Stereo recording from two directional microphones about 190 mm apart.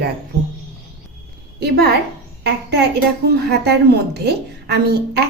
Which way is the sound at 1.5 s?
55° right (ahead or behind).